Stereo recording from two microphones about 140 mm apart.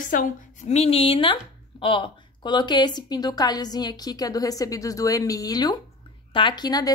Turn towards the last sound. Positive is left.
turn(degrees=30)  # may be behind; listen again after turning